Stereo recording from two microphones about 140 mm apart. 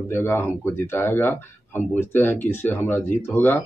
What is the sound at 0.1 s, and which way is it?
Speech, 15° left (ahead or behind).